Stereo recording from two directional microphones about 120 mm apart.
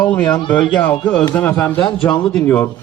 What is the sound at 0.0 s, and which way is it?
A man's voice, 10° left (ahead or behind).